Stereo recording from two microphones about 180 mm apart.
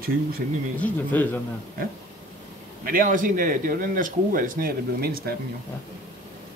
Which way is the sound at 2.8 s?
50° right (ahead or behind).